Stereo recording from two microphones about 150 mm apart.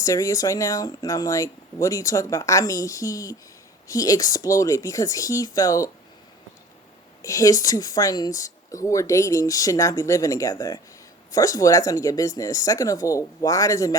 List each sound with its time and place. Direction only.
0.0 s speech: 20° left (ahead or behind)
7.2 s speech: 20° left (ahead or behind)